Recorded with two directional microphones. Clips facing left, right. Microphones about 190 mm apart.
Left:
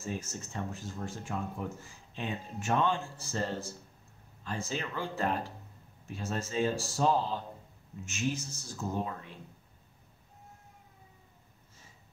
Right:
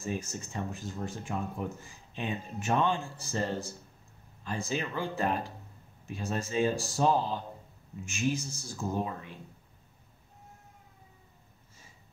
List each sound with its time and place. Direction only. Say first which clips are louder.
0.0 s speech: right 3 dB; 15° right (ahead or behind)